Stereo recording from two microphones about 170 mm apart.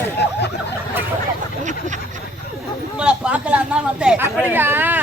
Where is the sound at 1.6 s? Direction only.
45° right (ahead or behind).